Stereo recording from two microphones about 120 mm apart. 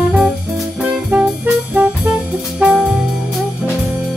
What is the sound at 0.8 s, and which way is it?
Music, 15° right (ahead or behind).